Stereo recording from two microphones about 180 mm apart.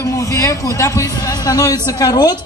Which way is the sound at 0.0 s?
20° left (ahead or behind).